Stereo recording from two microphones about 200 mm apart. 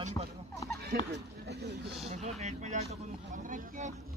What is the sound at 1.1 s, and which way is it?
Speech, 55° right (ahead or behind).